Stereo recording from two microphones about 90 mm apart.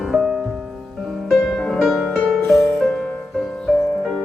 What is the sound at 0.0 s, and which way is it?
Music, 5° right (ahead or behind).